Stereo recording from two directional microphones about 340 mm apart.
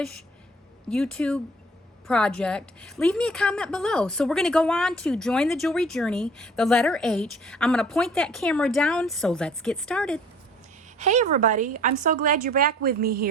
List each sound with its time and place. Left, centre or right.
0.9 s a woman's voice: centre
10.9 s a woman's voice: right